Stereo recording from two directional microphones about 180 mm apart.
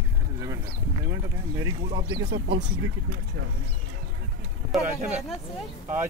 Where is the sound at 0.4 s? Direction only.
15° right (ahead or behind).